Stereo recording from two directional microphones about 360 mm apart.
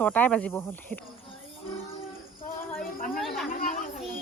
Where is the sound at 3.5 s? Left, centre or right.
Left.